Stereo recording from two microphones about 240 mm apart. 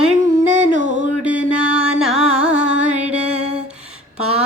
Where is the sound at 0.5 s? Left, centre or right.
Right.